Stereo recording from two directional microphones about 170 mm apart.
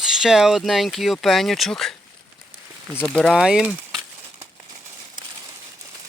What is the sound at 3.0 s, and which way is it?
Speech, 5° left (ahead or behind).